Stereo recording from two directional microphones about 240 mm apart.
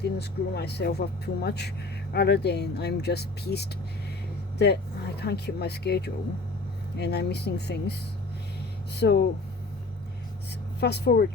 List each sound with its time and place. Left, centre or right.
0.0 s speech: left
10.8 s speech: left